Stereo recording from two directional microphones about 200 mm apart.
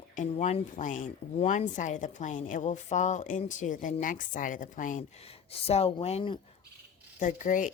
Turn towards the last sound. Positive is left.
turn(degrees=40)  # may be behind; listen again after turning